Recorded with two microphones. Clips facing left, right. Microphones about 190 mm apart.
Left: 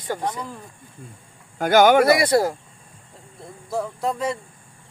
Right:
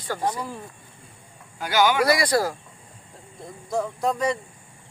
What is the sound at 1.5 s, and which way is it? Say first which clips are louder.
Speech: left 6 dB; 50° left (ahead or behind).